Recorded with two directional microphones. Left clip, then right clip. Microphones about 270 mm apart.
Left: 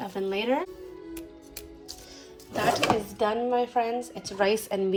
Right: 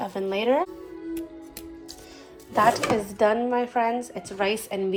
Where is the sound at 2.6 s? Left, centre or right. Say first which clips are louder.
Right 4 dB; centre.